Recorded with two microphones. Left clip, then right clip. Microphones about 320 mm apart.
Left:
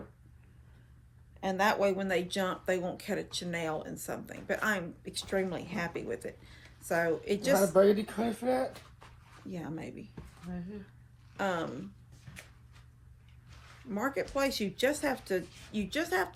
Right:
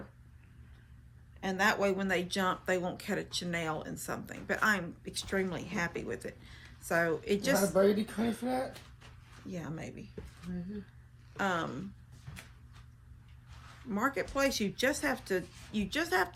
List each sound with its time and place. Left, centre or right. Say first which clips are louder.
1.4 s speech: left 1 dB; centre
7.8 s speech: left 3 dB; left
9.5 s speech: left 1 dB; centre
11.3 s speech: even; centre
13.9 s speech: even; centre